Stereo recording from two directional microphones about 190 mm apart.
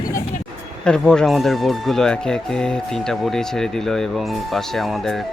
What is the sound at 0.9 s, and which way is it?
Speech, 5° left (ahead or behind).